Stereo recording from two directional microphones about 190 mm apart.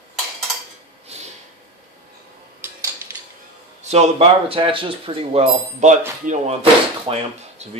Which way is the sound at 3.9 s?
30° right (ahead or behind).